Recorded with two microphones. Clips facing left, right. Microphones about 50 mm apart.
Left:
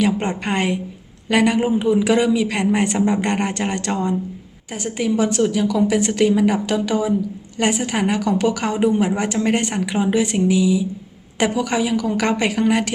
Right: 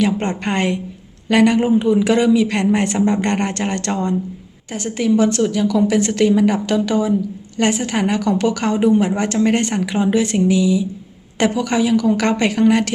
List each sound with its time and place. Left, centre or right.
0.0 s speech: centre
4.7 s speech: centre